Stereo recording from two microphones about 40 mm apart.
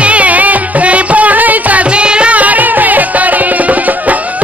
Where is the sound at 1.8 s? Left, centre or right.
Right.